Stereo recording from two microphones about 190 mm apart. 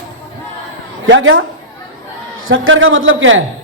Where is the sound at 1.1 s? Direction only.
90° right.